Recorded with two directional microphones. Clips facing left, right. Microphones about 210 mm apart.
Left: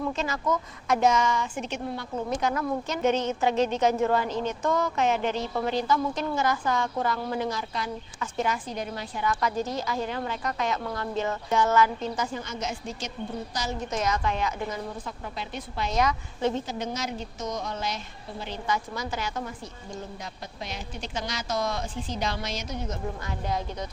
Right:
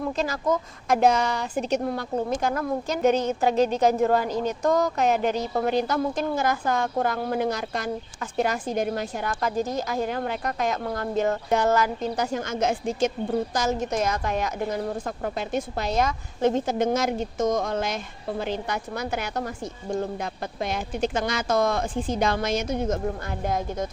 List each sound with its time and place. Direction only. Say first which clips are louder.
0.2 s a woman's voice: right 3 dB; 35° right (ahead or behind)
5.7 s a woman's voice: right 2 dB; 55° right (ahead or behind)
11.2 s speech: right 3 dB; 55° right (ahead or behind)
12.1 s a woman's voice: right 5 dB; 70° right (ahead or behind)
12.5 s a woman's voice: right 8 dB; 55° right (ahead or behind)